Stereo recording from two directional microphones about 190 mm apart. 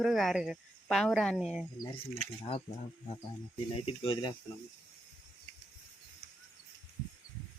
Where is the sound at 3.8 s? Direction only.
30° left (ahead or behind).